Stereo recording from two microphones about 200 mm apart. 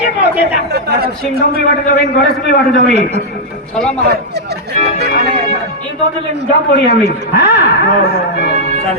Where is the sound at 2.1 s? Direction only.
50° left (ahead or behind).